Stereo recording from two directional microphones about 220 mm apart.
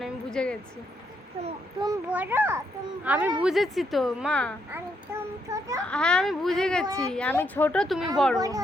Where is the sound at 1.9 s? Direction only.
10° right (ahead or behind).